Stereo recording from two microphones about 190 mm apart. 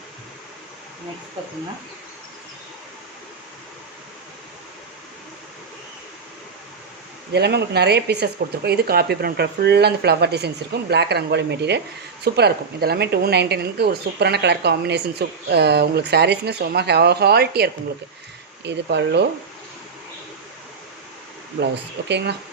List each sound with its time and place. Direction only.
7.3 s speech: 60° right (ahead or behind)
22.1 s speech: 60° right (ahead or behind)